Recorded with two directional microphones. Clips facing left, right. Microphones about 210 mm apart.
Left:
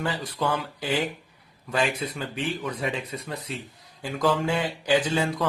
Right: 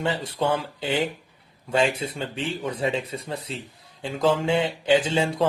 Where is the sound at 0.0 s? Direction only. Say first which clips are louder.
Right 3 dB; 25° right (ahead or behind).